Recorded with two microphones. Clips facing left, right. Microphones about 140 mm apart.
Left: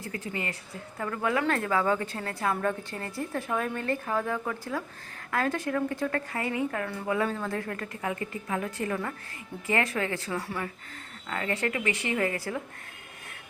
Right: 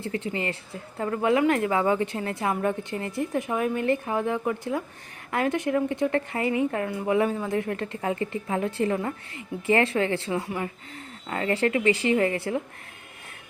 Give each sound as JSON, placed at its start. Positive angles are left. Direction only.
{"t": 0.0, "sound": "a woman's voice", "side_deg": -25}